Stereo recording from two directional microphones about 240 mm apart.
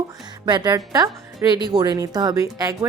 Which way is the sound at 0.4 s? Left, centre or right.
Centre.